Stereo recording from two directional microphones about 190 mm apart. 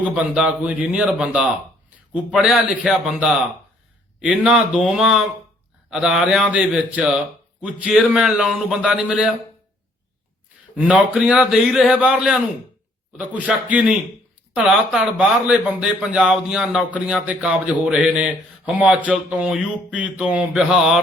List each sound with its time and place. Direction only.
0.1 s speech: 5° right (ahead or behind)
10.8 s speech: 5° right (ahead or behind)